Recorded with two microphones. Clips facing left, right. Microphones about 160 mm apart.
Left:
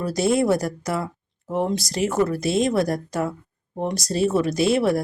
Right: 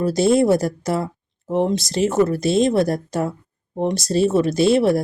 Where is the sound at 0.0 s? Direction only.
25° right (ahead or behind).